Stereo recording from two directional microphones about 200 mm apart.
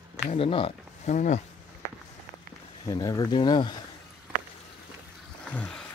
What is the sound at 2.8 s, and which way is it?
Speech, 20° left (ahead or behind).